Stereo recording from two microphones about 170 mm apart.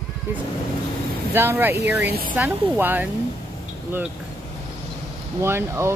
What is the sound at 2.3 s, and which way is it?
Speech, 10° right (ahead or behind).